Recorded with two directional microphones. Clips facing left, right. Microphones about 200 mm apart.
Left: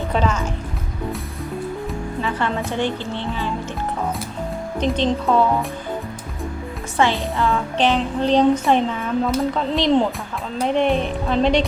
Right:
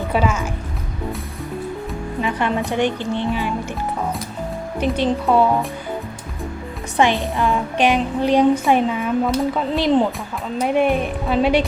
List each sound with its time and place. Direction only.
0.1 s speech: 10° right (ahead or behind)
2.2 s speech: 15° right (ahead or behind)
4.8 s speech: 10° right (ahead or behind)
6.9 s speech: 15° right (ahead or behind)